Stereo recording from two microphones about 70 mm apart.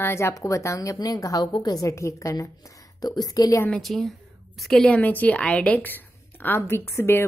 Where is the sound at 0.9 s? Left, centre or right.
Left.